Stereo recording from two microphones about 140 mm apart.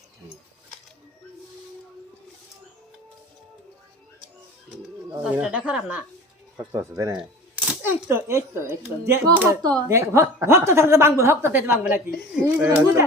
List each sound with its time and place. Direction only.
5.2 s speech: 10° right (ahead or behind)
6.7 s a woman's voice: 20° right (ahead or behind)